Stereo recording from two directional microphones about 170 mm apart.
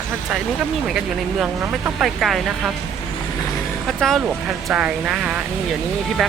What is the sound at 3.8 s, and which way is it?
Speech, centre (ahead or behind).